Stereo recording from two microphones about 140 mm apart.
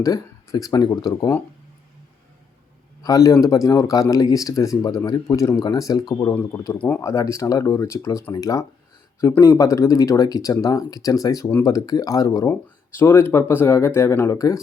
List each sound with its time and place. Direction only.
0.0 s speech: 25° left (ahead or behind)
3.0 s speech: 25° left (ahead or behind)
6.7 s speech: 10° left (ahead or behind)
7.0 s speech: 20° left (ahead or behind)